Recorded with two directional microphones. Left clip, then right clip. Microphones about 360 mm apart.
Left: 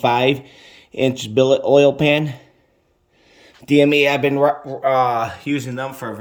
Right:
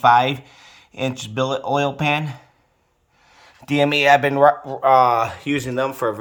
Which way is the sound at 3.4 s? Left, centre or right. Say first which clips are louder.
Left 4 dB; right.